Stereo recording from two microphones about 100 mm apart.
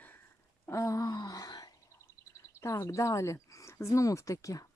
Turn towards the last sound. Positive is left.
turn(degrees=35)  # may be behind; listen again after turning